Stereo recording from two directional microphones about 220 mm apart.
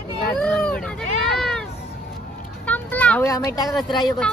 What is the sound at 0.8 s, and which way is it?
Hubbub, centre (ahead or behind).